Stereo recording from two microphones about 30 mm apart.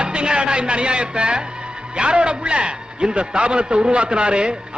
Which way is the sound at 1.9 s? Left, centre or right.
Right.